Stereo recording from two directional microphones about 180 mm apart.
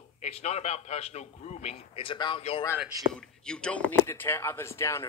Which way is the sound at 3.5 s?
5° left (ahead or behind).